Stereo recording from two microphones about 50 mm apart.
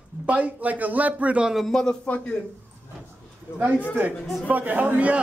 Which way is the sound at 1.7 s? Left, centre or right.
Centre.